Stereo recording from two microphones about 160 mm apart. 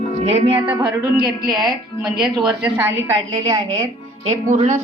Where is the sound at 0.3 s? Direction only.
40° right (ahead or behind); by 1.5 s 25° right (ahead or behind).